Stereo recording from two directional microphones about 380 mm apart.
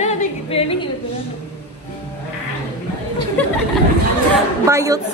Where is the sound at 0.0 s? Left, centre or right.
Centre.